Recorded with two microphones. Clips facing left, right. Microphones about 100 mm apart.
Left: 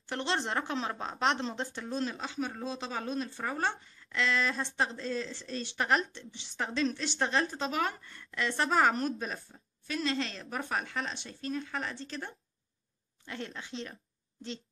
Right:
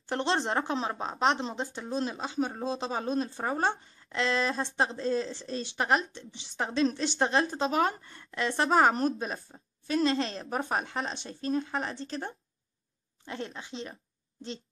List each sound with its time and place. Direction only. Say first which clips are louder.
0.1 s speech: right 4 dB; 25° right (ahead or behind)